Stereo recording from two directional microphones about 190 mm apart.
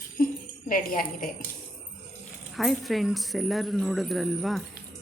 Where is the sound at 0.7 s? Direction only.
50° left (ahead or behind).